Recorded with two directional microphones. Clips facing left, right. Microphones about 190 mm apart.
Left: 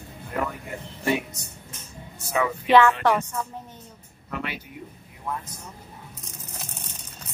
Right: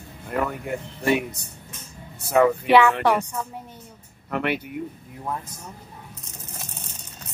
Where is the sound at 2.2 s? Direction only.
60° right (ahead or behind).